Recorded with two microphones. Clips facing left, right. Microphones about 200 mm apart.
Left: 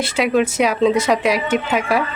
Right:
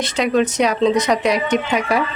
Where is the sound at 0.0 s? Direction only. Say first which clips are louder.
Even; 5° left (ahead or behind).